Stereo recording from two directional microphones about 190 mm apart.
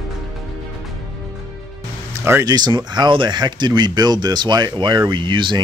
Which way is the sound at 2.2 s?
15° right (ahead or behind).